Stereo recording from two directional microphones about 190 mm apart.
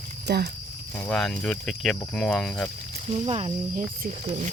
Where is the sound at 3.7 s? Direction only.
40° right (ahead or behind).